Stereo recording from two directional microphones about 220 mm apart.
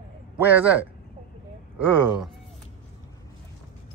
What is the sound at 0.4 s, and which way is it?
Speech, 5° right (ahead or behind).